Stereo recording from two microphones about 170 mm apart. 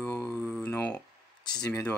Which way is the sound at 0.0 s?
10° left (ahead or behind).